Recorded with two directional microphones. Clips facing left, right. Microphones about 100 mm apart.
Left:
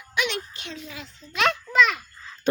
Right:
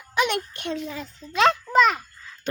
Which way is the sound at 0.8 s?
40° right (ahead or behind).